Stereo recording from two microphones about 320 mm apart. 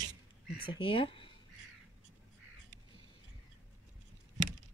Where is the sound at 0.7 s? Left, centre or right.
Centre.